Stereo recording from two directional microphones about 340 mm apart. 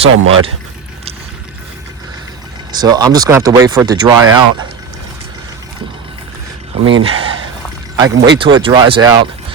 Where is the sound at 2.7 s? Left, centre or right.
Centre.